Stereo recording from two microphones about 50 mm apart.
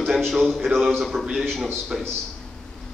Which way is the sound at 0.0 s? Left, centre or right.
Centre.